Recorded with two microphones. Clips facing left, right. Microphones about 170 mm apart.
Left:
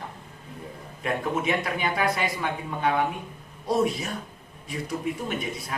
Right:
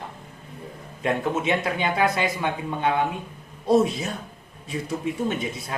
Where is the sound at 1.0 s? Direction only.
25° right (ahead or behind).